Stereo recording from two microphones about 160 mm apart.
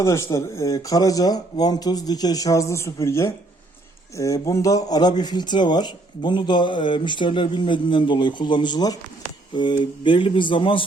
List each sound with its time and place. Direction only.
0.0 s speech: 15° left (ahead or behind); by 10.8 s 35° left (ahead or behind)